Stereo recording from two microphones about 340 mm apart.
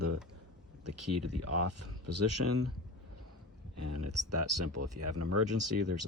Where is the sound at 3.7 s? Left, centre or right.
Right.